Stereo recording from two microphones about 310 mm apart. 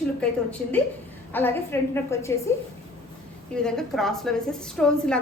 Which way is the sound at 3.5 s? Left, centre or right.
Centre.